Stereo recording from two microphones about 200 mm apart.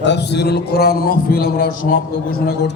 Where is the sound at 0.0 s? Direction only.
60° left (ahead or behind).